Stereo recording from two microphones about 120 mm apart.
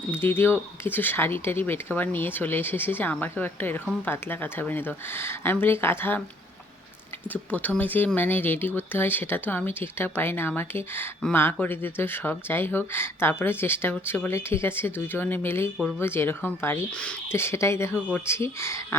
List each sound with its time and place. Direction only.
0.1 s speech: 20° left (ahead or behind)
7.3 s speech: 15° left (ahead or behind)